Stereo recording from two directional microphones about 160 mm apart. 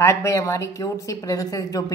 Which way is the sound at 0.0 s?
20° left (ahead or behind).